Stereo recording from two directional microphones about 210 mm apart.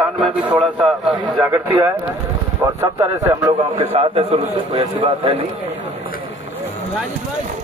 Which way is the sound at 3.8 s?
30° right (ahead or behind).